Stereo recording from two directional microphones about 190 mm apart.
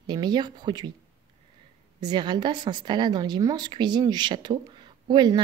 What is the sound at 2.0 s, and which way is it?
A woman's voice, 25° right (ahead or behind).